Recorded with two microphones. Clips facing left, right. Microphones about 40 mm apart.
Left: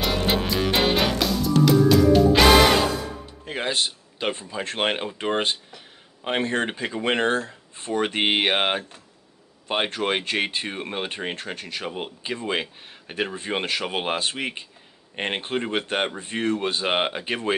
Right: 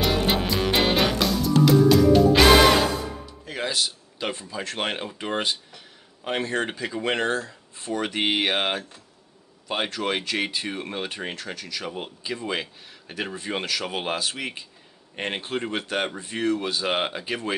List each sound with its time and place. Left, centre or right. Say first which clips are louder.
0.0 s music: right 1 dB; centre
3.4 s speech: left 2 dB; left